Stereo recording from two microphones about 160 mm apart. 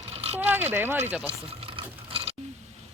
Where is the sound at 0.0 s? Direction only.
40° right (ahead or behind).